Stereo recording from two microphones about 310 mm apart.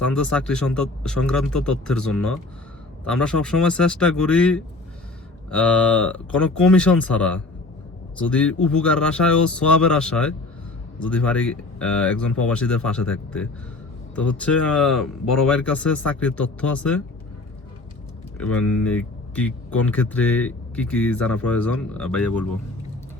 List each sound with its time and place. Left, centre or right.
0.2 s speech: centre
18.3 s speech: centre